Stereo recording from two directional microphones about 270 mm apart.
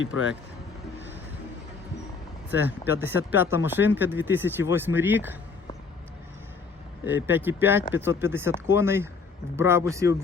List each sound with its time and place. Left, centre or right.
0.0 s speech: left
2.5 s speech: centre
7.0 s speech: centre